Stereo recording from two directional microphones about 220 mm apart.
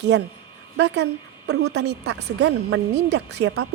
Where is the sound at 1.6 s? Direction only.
50° right (ahead or behind).